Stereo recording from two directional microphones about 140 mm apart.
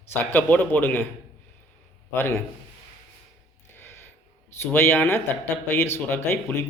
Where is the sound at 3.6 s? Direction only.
15° left (ahead or behind).